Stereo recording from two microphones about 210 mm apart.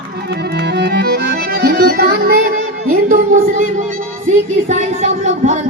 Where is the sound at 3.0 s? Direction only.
40° right (ahead or behind).